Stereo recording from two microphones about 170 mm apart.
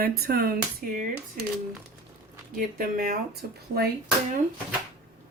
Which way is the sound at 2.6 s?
55° right (ahead or behind).